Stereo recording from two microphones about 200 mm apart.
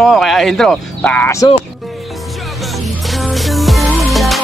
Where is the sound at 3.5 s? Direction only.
Centre (ahead or behind).